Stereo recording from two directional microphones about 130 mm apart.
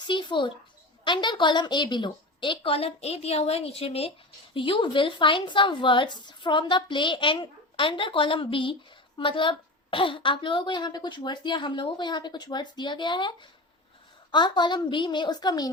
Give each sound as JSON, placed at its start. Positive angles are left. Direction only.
{"t": 0.0, "sound": "a woman's voice", "side_deg": 35}